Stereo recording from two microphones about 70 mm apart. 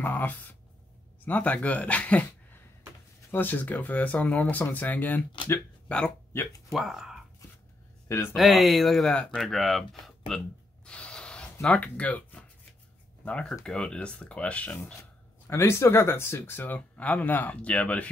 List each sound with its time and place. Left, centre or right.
0.0 s speech: left
3.3 s speech: left
6.7 s speech: centre
8.1 s speech: left
8.4 s speech: centre
9.1 s speech: centre
9.4 s speech: centre
10.9 s spray: centre
11.6 s speech: centre
15.5 s speech: left; by 18.1 s centre